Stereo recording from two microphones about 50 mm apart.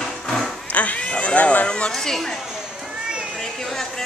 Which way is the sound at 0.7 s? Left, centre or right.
Left.